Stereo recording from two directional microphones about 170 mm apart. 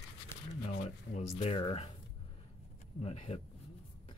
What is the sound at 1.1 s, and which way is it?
Speech, 40° left (ahead or behind).